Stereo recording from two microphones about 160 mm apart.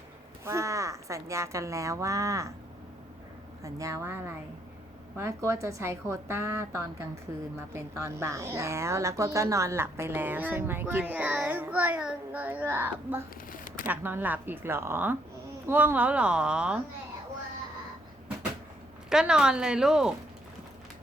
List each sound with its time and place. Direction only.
0.4 s speech: 20° right (ahead or behind)
3.6 s speech: 20° right (ahead or behind)
19.1 s speech: 5° right (ahead or behind)